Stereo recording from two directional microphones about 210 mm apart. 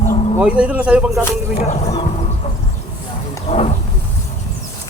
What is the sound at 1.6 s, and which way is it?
Speech, 30° left (ahead or behind).